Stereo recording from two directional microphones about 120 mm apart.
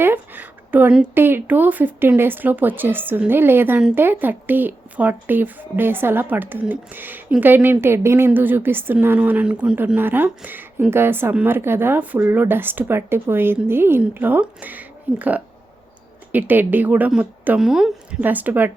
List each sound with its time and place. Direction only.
0.0 s a woman's voice: 15° right (ahead or behind)